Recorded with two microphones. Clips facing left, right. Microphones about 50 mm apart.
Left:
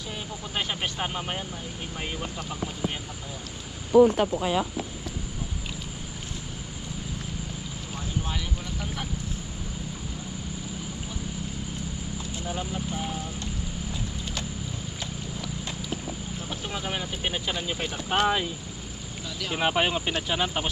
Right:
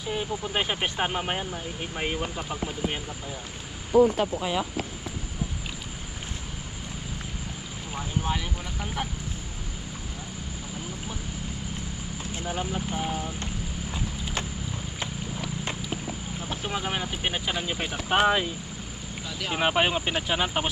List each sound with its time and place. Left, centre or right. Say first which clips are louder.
0.1 s speech: right 6 dB; centre
3.9 s speech: left 2 dB; left
7.9 s vehicle: right 4 dB; centre
12.4 s speech: right 3 dB; right
16.4 s speech: right 4 dB; centre